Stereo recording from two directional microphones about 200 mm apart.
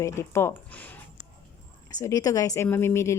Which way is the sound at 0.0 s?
15° left (ahead or behind).